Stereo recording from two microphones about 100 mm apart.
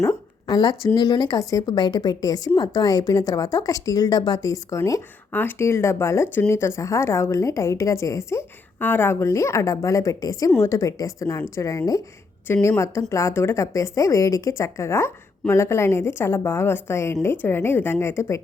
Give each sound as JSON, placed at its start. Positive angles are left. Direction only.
{"t": 0.0, "sound": "a sound", "side_deg": 30}
{"t": 0.5, "sound": "a woman's voice", "side_deg": 40}
{"t": 5.3, "sound": "a woman's voice", "side_deg": 20}